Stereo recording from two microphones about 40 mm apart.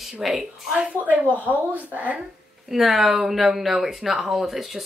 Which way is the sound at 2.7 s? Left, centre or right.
Centre.